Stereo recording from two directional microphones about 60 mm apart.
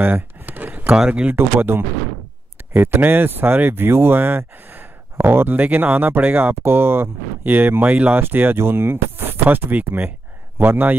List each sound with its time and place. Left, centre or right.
0.0 s a sound: right
0.9 s speech: centre
1.3 s speech: right